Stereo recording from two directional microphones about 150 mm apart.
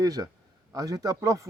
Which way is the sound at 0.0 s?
25° right (ahead or behind).